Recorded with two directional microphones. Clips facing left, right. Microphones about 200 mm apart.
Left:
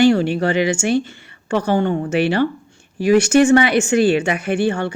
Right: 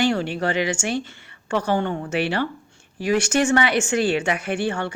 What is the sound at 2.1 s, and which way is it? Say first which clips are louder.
A woman's voice: left 6 dB; 15° left (ahead or behind).